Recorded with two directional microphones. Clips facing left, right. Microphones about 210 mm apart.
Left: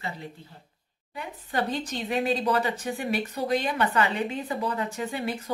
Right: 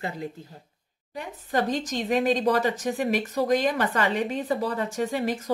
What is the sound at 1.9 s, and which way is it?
Speech, 40° right (ahead or behind).